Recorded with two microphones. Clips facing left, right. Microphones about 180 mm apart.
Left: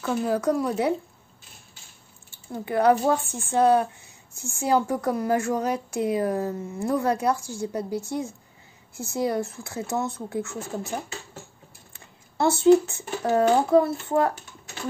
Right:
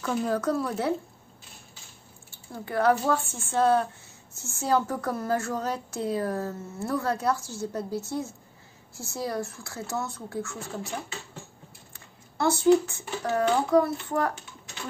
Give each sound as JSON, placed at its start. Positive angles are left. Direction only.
{"t": 0.0, "sound": "a woman's voice", "side_deg": 5}
{"t": 2.5, "sound": "a woman's voice", "side_deg": 20}
{"t": 11.9, "sound": "speech", "side_deg": 25}